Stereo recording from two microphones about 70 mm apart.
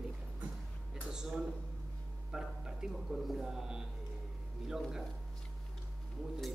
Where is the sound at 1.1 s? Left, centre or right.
Centre.